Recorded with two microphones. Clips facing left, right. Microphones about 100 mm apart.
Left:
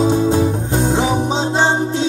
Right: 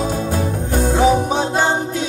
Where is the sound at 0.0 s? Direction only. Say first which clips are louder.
Left 6 dB; 20° left (ahead or behind).